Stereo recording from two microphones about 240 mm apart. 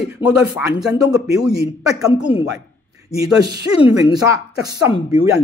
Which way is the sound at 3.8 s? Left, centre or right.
Centre.